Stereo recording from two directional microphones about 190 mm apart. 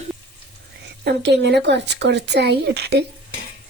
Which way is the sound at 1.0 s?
65° right (ahead or behind).